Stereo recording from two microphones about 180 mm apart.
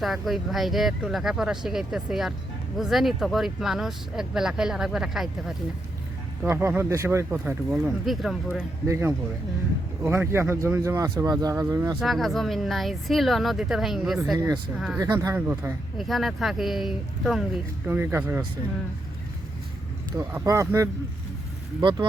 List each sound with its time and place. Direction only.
0.0 s speech: centre (ahead or behind)
6.4 s speech: 15° right (ahead or behind)
8.9 s speech: 15° right (ahead or behind)
11.9 s speech: centre (ahead or behind)
14.3 s speech: 20° right (ahead or behind)
16.0 s speech: centre (ahead or behind)
20.1 s speech: 15° right (ahead or behind)
21.8 s speech: 25° right (ahead or behind)